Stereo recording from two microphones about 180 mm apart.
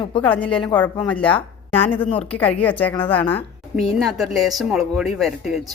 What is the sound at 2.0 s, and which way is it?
Speech, 30° left (ahead or behind).